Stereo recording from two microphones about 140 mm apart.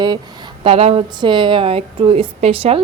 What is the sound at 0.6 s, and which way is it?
Speech, 45° right (ahead or behind).